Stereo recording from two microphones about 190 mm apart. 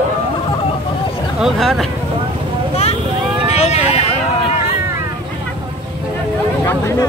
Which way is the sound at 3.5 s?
35° left (ahead or behind).